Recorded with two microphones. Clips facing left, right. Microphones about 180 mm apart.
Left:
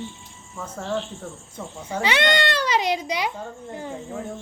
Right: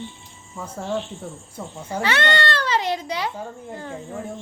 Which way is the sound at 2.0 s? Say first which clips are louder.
Left 1 dB; 15° left (ahead or behind).